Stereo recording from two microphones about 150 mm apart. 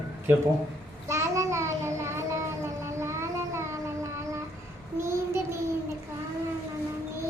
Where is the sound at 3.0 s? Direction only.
20° right (ahead or behind).